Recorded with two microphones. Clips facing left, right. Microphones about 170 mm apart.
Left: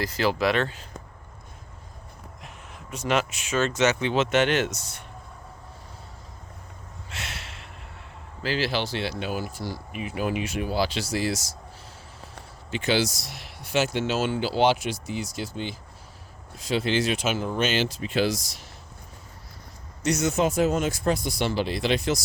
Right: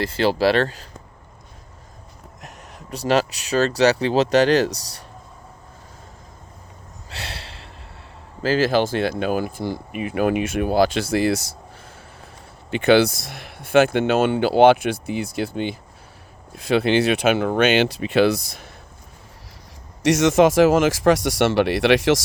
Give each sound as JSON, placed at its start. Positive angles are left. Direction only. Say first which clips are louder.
{"t": 0.0, "sound": "speech", "louder": "right 5 dB", "side_deg": -30}
{"t": 2.4, "sound": "speech", "louder": "right 6 dB", "side_deg": -40}
{"t": 7.1, "sound": "a sound", "louder": "right 4 dB", "side_deg": -35}
{"t": 8.4, "sound": "speech", "louder": "right 8 dB", "side_deg": -45}
{"t": 12.7, "sound": "speech", "louder": "right 9 dB", "side_deg": -60}
{"t": 20.1, "sound": "speech", "louder": "right 8 dB", "side_deg": -90}